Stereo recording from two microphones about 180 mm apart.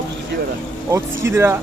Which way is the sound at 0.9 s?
15° right (ahead or behind).